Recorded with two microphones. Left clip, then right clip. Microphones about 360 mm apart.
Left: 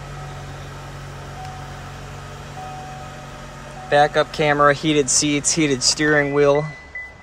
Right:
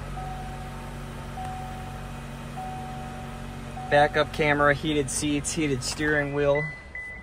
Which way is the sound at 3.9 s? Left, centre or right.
Centre.